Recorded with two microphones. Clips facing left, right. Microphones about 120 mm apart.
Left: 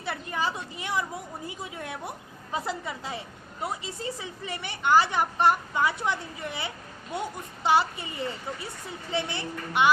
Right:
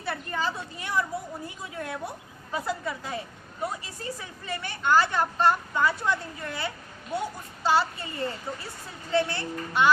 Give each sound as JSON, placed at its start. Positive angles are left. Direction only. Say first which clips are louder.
{"t": 0.0, "sound": "a woman's voice", "louder": "even", "side_deg": 15}